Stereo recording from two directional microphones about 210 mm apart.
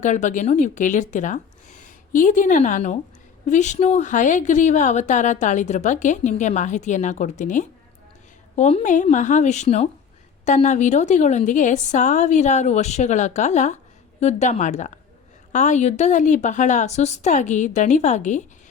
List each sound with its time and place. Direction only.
0.0 s a woman's voice: 35° left (ahead or behind)